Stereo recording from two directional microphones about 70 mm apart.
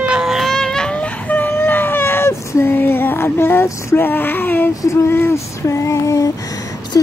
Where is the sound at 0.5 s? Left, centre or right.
Centre.